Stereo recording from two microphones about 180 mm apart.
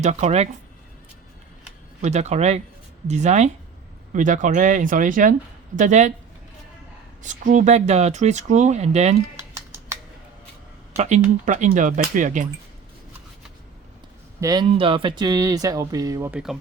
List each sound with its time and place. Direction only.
0.0 s speech: 40° right (ahead or behind)
2.0 s speech: 40° right (ahead or behind)
7.2 s speech: 45° right (ahead or behind)
10.9 s speech: 40° right (ahead or behind)
14.4 s speech: 20° right (ahead or behind)
16.3 s speech: 5° right (ahead or behind)